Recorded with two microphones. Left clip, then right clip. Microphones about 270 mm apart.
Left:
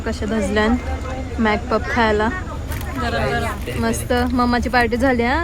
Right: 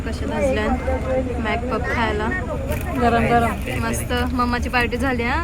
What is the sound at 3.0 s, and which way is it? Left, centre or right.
Speech, centre.